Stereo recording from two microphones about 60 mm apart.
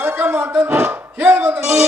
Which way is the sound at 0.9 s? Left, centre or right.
Right.